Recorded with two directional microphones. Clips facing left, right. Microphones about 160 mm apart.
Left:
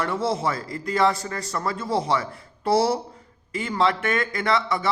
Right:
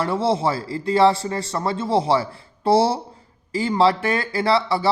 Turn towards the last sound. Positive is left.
turn(degrees=-30)  # may be behind; listen again after turning